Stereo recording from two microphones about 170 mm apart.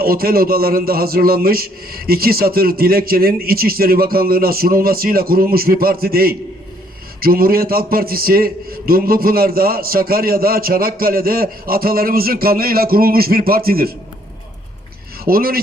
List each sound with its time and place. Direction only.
0.0 s a man's voice: 60° right (ahead or behind)
15.2 s speech: 60° right (ahead or behind)